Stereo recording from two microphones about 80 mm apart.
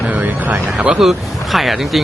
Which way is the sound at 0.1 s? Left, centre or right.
Right.